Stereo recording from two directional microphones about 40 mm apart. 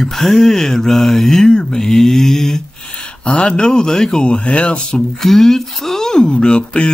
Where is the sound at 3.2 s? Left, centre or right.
Left.